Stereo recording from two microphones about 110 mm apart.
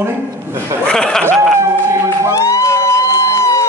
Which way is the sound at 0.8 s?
5° left (ahead or behind).